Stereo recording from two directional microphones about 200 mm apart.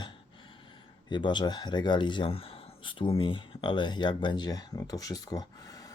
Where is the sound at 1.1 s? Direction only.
25° left (ahead or behind).